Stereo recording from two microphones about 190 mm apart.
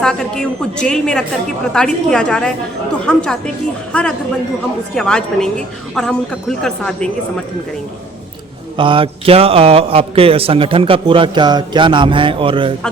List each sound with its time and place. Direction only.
0.0 s speech: 5° left (ahead or behind)
8.8 s a man's voice: 25° right (ahead or behind)